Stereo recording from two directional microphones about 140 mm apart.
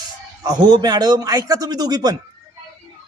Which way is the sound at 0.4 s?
30° right (ahead or behind).